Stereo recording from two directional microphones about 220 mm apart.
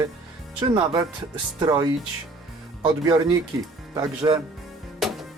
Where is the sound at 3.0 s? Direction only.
20° right (ahead or behind).